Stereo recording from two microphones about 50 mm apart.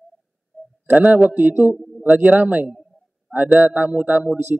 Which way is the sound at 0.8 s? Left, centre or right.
Right.